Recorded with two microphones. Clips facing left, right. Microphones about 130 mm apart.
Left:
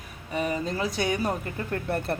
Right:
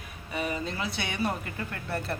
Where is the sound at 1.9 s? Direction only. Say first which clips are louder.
Left 4 dB; 55° left (ahead or behind).